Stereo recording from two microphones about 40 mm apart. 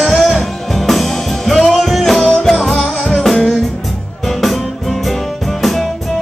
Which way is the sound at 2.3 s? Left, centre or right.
Centre.